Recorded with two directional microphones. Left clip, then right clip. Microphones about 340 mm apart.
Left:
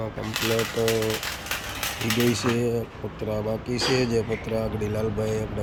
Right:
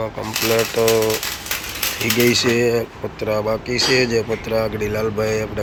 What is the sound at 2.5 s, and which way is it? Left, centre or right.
Speech, centre.